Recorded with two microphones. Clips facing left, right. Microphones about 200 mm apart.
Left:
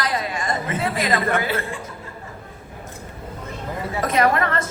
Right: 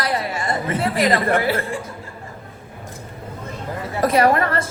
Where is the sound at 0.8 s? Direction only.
35° right (ahead or behind).